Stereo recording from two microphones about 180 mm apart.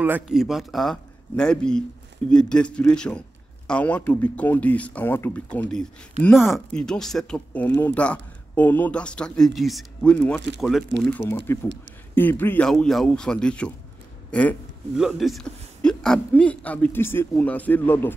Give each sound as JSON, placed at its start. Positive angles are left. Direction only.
{"t": 0.0, "sound": "speech", "side_deg": -5}
{"t": 6.2, "sound": "speech", "side_deg": -35}
{"t": 6.5, "sound": "speech", "side_deg": 5}